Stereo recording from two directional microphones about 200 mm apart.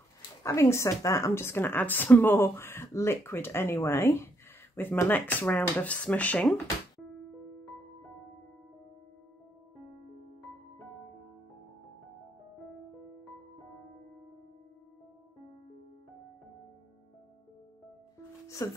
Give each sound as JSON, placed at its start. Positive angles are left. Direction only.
{"t": 0.4, "sound": "a woman's voice", "side_deg": 15}
{"t": 9.8, "sound": "music", "side_deg": 0}
{"t": 13.2, "sound": "music", "side_deg": 0}
{"t": 18.6, "sound": "a woman's voice", "side_deg": 15}